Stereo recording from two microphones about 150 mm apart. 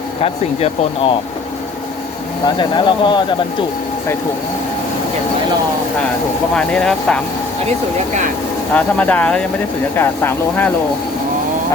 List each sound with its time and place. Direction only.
0.2 s speech: 45° left (ahead or behind)
2.6 s speech: 30° left (ahead or behind)
6.6 s speech: 5° left (ahead or behind)
8.7 s speech: 10° left (ahead or behind)